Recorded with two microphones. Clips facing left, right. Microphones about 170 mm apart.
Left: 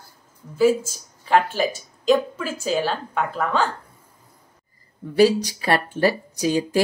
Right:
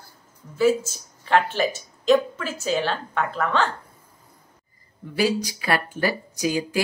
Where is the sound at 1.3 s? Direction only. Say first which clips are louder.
Left 1 dB; 5° left (ahead or behind).